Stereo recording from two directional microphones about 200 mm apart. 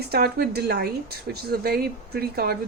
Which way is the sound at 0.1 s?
50° right (ahead or behind).